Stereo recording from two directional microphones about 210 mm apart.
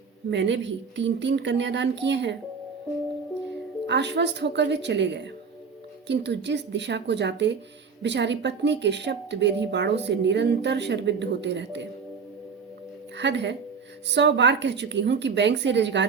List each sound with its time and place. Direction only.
0.3 s a woman's voice: 60° right (ahead or behind)
3.8 s a woman's voice: 55° right (ahead or behind)
13.1 s a woman's voice: 55° right (ahead or behind)